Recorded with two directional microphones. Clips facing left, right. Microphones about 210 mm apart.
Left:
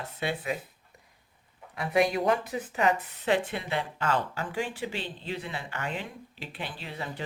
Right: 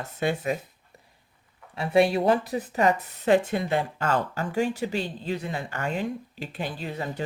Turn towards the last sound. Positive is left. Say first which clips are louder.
# right 6 dB
turn(degrees=-40)  # may be behind; listen again after turning